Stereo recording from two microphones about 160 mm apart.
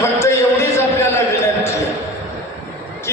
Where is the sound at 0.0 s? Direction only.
15° left (ahead or behind).